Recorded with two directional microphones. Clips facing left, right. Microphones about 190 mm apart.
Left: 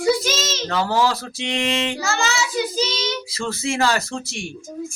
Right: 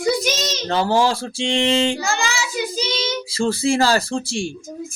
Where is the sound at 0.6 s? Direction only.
30° right (ahead or behind).